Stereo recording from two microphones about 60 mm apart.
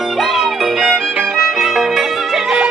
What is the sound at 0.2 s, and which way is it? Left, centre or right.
Music, centre.